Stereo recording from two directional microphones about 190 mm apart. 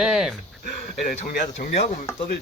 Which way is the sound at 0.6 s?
45° left (ahead or behind).